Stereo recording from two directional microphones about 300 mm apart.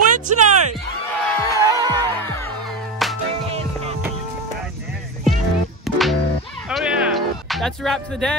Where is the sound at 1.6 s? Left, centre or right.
Centre.